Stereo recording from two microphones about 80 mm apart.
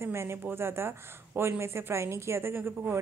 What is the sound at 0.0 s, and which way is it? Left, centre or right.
A woman's voice, right.